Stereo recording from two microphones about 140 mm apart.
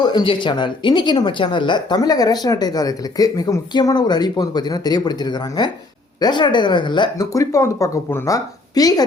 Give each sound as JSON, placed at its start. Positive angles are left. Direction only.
{"t": 0.0, "sound": "speech", "side_deg": 30}